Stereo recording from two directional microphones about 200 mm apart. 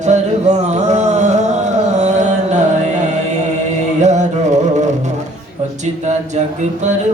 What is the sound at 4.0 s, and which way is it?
Carnatic music, 35° right (ahead or behind).